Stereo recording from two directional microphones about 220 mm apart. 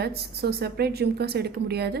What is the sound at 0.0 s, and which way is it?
A woman's voice, 45° right (ahead or behind).